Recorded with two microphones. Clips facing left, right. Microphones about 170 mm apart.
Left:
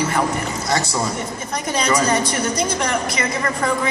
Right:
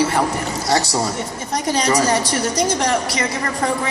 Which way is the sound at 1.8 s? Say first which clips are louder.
Even; 40° right (ahead or behind).